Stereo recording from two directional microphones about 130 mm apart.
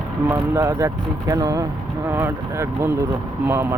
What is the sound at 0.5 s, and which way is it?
Speech, 25° right (ahead or behind).